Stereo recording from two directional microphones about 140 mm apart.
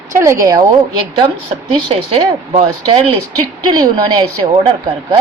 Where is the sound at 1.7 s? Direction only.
35° right (ahead or behind).